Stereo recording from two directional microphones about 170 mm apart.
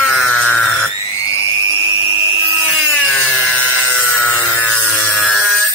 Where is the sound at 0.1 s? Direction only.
Centre (ahead or behind).